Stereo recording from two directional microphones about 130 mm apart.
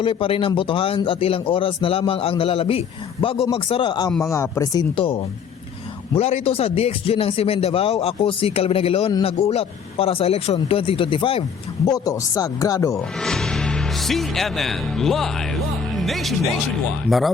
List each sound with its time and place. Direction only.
0.0 s a man's voice: 45° left (ahead or behind)
4.2 s speech: 20° left (ahead or behind)
6.1 s a man's voice: 50° left (ahead or behind)
11.9 s speech: 25° left (ahead or behind)
13.0 s speech: 5° left (ahead or behind)